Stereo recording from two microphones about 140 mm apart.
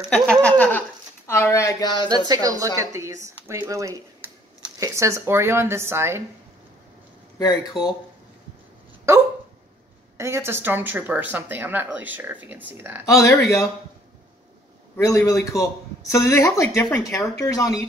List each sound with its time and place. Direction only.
0.1 s speech: 5° left (ahead or behind); by 2.0 s 30° left (ahead or behind)
2.0 s speech: 30° right (ahead or behind)
9.1 s speech: 20° right (ahead or behind)
13.0 s speech: 20° left (ahead or behind)
15.0 s speech: 25° left (ahead or behind)